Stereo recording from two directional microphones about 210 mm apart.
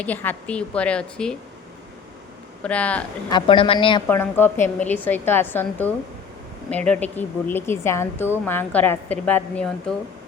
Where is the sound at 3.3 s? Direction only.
25° left (ahead or behind).